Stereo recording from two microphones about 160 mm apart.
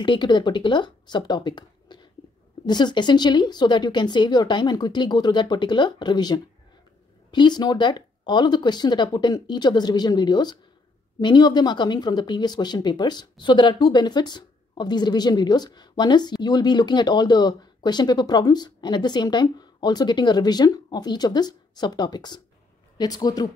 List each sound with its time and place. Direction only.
0.0 s speech: 30° left (ahead or behind)